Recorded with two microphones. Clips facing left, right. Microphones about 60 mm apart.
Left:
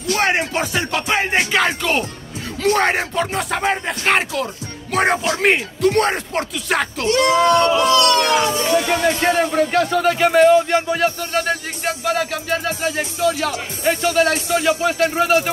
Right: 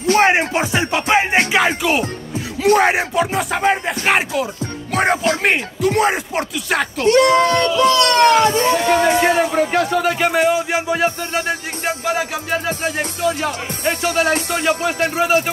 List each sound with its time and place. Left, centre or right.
0.2 s music: right
1.5 s speech: centre
7.1 s speech: right
7.4 s a sound: left
8.0 s speech: right
9.2 s speech: centre